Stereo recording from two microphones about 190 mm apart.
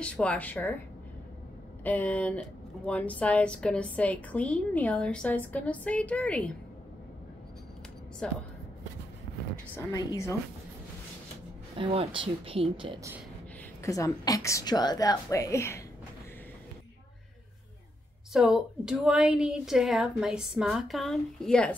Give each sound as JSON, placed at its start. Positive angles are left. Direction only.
{"t": 0.0, "sound": "speech", "side_deg": 5}
{"t": 1.8, "sound": "speech", "side_deg": 10}
{"t": 8.2, "sound": "a woman's voice", "side_deg": 5}
{"t": 9.8, "sound": "speech", "side_deg": 15}
{"t": 11.7, "sound": "speech", "side_deg": -30}
{"t": 13.8, "sound": "speech", "side_deg": 15}
{"t": 18.3, "sound": "a woman's voice", "side_deg": 0}